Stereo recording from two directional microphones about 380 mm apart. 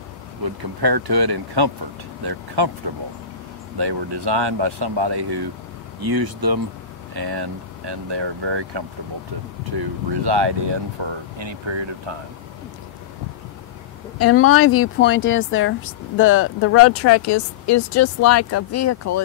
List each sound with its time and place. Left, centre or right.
0.6 s speech: right
3.7 s speech: right
5.9 s speech: right
7.2 s speech: right
14.1 s speech: left